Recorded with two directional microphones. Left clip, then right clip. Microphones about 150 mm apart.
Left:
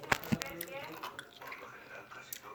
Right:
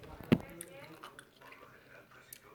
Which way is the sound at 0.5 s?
20° right (ahead or behind).